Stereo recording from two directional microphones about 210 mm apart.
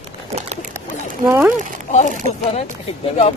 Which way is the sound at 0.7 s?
10° right (ahead or behind).